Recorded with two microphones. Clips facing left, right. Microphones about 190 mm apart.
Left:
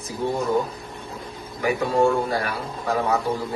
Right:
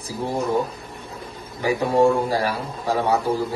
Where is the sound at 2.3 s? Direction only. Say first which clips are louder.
Right 3 dB; 30° right (ahead or behind).